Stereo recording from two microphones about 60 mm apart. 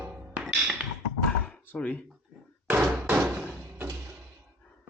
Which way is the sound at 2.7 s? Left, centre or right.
Right.